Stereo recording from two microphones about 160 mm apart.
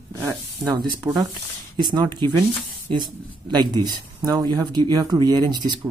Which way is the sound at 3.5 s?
25° right (ahead or behind).